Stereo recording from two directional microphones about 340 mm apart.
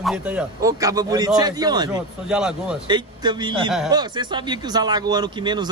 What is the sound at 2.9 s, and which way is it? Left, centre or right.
A man's voice, centre.